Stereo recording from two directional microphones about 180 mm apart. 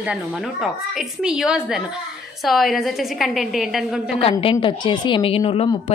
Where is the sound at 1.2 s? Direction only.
5° right (ahead or behind).